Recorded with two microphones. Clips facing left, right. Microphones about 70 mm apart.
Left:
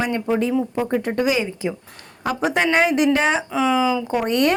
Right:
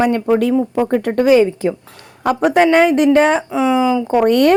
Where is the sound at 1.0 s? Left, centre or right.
Right.